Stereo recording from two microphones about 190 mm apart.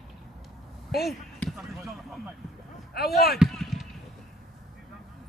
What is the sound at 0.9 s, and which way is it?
Basketball bounce, centre (ahead or behind).